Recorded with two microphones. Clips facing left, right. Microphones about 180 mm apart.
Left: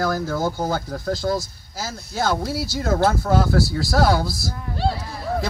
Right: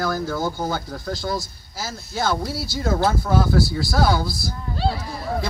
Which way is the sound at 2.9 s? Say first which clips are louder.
Left 2 dB; 60° left (ahead or behind).